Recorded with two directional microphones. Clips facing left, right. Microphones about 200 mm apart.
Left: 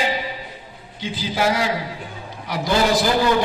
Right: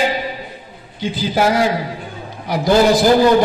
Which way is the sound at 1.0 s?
50° right (ahead or behind).